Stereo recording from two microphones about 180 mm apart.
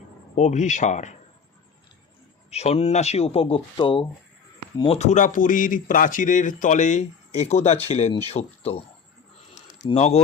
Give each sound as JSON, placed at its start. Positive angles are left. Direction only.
{"t": 0.3, "sound": "speech", "side_deg": 40}
{"t": 2.5, "sound": "speech", "side_deg": 35}
{"t": 9.9, "sound": "speech", "side_deg": 35}